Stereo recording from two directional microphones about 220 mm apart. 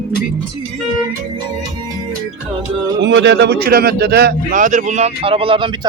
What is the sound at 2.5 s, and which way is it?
Music, 25° right (ahead or behind).